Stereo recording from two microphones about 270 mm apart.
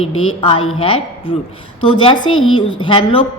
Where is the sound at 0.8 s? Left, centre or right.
Left.